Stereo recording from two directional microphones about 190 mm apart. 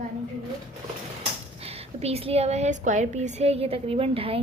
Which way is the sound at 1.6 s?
30° right (ahead or behind).